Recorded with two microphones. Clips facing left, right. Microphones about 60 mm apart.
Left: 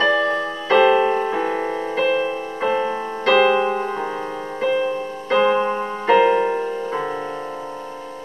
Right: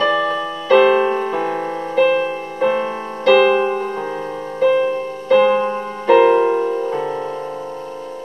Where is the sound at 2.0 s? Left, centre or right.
Centre.